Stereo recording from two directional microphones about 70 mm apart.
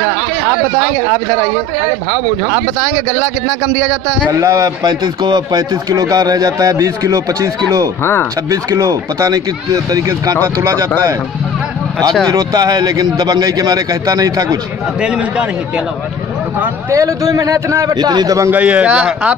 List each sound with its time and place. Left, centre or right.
4.3 s speech: right
8.0 s speech: left
8.5 s speech: right
10.4 s speech: right
12.3 s speech: right
15.0 s speech: centre
16.9 s speech: right
17.9 s a man's voice: right
18.5 s speech: centre